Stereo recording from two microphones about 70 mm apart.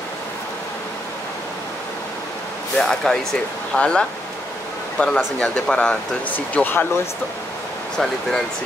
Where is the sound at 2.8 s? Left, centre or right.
Centre; by 6.8 s left.